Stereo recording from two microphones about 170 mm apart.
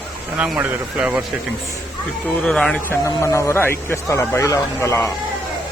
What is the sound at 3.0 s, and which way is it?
Speech, 15° left (ahead or behind).